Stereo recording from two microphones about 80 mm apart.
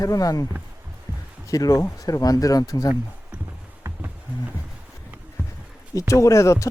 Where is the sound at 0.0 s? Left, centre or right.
Left.